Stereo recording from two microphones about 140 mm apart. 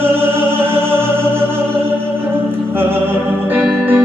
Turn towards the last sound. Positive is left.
turn(degrees=-15)  # may be behind; listen again after turning